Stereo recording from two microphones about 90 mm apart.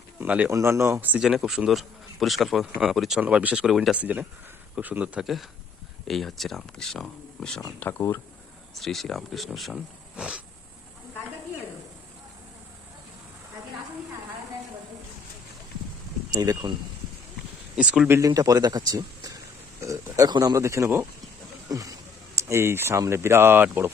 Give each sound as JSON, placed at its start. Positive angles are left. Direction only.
{"t": 0.2, "sound": "speech", "side_deg": -15}
{"t": 0.5, "sound": "speech", "side_deg": -30}
{"t": 1.2, "sound": "speech", "side_deg": -5}
{"t": 3.9, "sound": "speech", "side_deg": -15}
{"t": 5.2, "sound": "speech", "side_deg": 0}
{"t": 7.8, "sound": "speech", "side_deg": 25}
{"t": 8.7, "sound": "speech", "side_deg": 0}
{"t": 16.3, "sound": "speech", "side_deg": -45}
{"t": 17.7, "sound": "speech", "side_deg": -10}
{"t": 18.2, "sound": "speech", "side_deg": -40}
{"t": 19.8, "sound": "a sound", "side_deg": -35}
{"t": 20.4, "sound": "speech", "side_deg": -35}